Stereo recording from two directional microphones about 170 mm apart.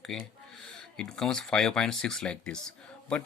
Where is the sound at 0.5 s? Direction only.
5° left (ahead or behind).